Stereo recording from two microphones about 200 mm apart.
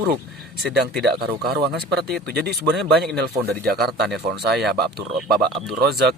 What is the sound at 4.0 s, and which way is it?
Speech, centre (ahead or behind).